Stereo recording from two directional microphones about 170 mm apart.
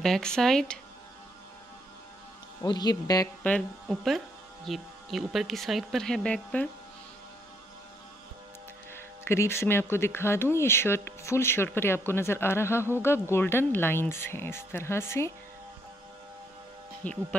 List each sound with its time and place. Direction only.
0.0 s speech: 5° left (ahead or behind)
2.6 s speech: 25° left (ahead or behind)
3.8 s speech: centre (ahead or behind)
8.9 s speech: 15° left (ahead or behind)
17.0 s speech: 5° left (ahead or behind)